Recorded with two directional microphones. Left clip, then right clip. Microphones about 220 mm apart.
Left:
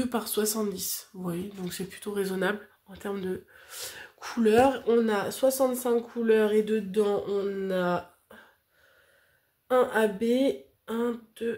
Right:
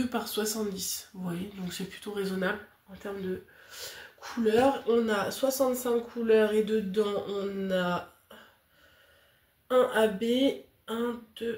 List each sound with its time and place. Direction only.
0.0 s speech: 40° left (ahead or behind)
9.7 s speech: 35° left (ahead or behind)